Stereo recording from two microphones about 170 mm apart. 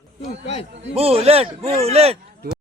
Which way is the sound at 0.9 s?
35° right (ahead or behind).